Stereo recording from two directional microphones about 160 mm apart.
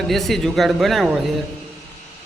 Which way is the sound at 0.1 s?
Centre (ahead or behind).